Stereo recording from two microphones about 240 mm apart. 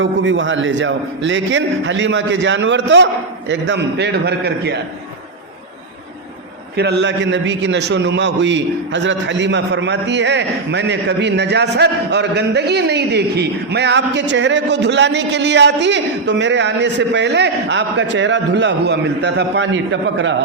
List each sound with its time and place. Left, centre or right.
0.0 s a man's voice: right
6.7 s a man's voice: right